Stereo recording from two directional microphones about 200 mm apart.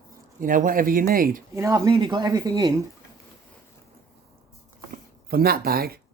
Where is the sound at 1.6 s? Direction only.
15° right (ahead or behind).